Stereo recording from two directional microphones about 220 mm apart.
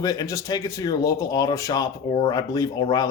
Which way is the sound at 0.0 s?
15° left (ahead or behind).